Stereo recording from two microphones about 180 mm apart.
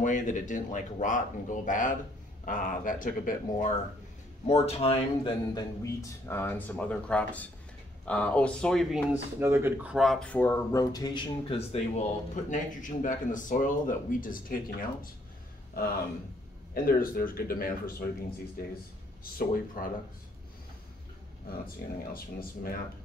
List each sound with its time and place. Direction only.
0.0 s a man's voice: 45° left (ahead or behind)
4.5 s speech: 35° left (ahead or behind); by 9.0 s 5° left (ahead or behind)
9.4 s speech: 15° right (ahead or behind); by 14.9 s 50° left (ahead or behind)
16.7 s speech: 55° left (ahead or behind)
19.3 s a man's voice: 50° left (ahead or behind)
21.8 s speech: 60° left (ahead or behind)